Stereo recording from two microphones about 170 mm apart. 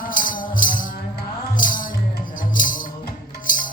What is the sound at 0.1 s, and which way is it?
Music, 50° left (ahead or behind).